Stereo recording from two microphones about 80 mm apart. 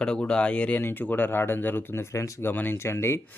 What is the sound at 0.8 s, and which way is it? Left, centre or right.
Speech, left.